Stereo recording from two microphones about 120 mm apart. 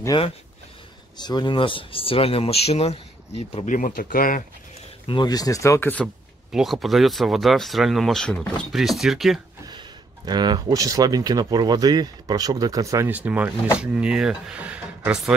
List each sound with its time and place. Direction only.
0.1 s speech: 40° left (ahead or behind); by 3.6 s 55° left (ahead or behind)
3.6 s speech: 90° left
5.0 s speech: 40° left (ahead or behind); by 6.0 s 15° left (ahead or behind)
6.5 s speech: centre (ahead or behind)
9.7 s speech: 35° right (ahead or behind)
13.1 s speech: 10° right (ahead or behind)